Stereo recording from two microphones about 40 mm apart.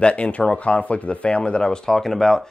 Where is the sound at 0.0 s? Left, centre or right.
Left.